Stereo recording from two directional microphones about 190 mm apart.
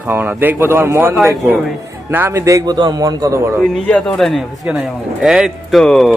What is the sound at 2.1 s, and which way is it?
Speech, 15° right (ahead or behind).